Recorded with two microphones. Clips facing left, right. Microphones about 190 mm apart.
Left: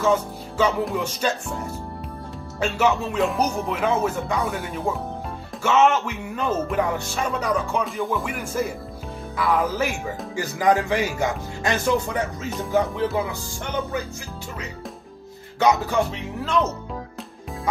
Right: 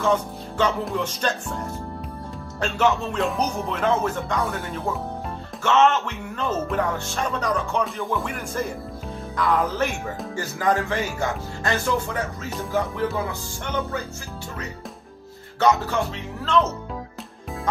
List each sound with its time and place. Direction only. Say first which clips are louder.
0.0 s music: left 1 dB; 5° left (ahead or behind)
4.5 s speech: left 1 dB; 15° left (ahead or behind)
7.2 s music: left 1 dB; 5° left (ahead or behind)
10.3 s speech: left 3 dB; 15° left (ahead or behind)
15.6 s music: left 1 dB; 15° left (ahead or behind)